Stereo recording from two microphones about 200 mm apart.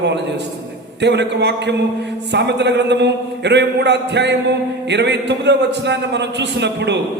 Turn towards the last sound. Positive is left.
turn(degrees=-60)  # may be behind; listen again after turning